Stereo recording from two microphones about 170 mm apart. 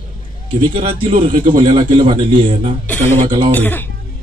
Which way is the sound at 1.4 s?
50° right (ahead or behind).